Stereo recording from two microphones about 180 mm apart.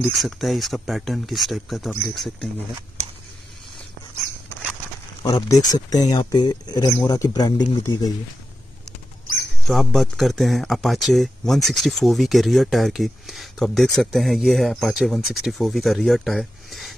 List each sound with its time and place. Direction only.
0.0 s speech: centre (ahead or behind)
5.2 s speech: 20° left (ahead or behind)
9.7 s speech: centre (ahead or behind)